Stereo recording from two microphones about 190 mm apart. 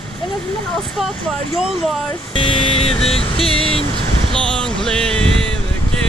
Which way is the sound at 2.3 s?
25° left (ahead or behind).